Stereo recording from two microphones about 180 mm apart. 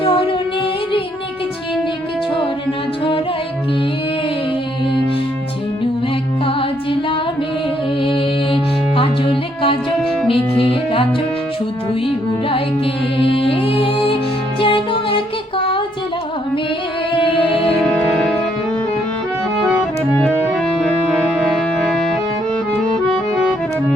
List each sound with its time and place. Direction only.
0.0 s music: 30° left (ahead or behind)
8.0 s music: 30° left (ahead or behind)
12.5 s music: 30° left (ahead or behind)
17.1 s music: 30° left (ahead or behind)
17.8 s music: 5° left (ahead or behind)
20.2 s music: centre (ahead or behind)